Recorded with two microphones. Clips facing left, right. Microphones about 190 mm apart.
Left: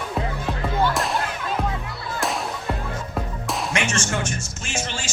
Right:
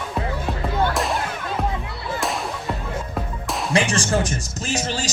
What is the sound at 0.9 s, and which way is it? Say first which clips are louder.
Fireworks: right 2 dB; centre (ahead or behind).